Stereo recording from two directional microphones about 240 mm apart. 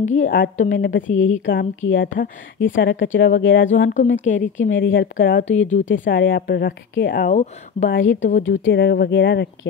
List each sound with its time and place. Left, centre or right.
0.0 s speech: left
1.8 s speech: left
3.6 s speech: left
5.9 s speech: left
6.1 s speech: left
8.5 s speech: left